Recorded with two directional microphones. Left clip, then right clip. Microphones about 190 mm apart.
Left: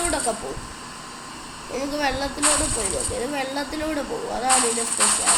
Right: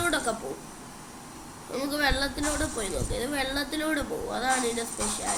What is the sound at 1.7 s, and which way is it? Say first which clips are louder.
Speech: left 2 dB; 5° right (ahead or behind).